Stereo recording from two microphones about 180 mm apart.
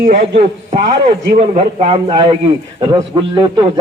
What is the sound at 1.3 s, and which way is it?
Speech, 40° right (ahead or behind).